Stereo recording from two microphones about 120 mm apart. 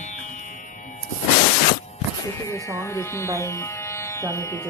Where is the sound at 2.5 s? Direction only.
25° left (ahead or behind).